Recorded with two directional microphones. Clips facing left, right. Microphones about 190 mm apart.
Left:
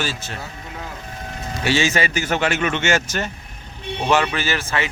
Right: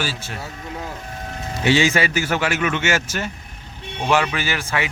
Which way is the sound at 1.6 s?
15° right (ahead or behind).